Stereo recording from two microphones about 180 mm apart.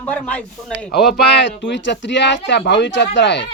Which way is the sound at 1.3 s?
75° left (ahead or behind).